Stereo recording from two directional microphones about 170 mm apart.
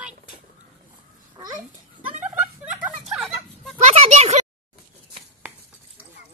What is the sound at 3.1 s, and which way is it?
Fowl, centre (ahead or behind).